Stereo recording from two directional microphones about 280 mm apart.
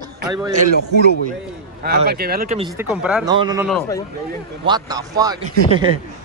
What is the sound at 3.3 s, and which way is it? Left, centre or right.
Speech, centre.